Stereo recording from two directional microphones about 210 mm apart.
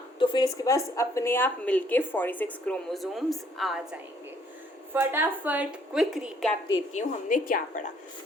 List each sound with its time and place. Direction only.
0.2 s a woman's voice: 20° left (ahead or behind); by 6.6 s centre (ahead or behind)
6.9 s a woman's voice: 40° left (ahead or behind)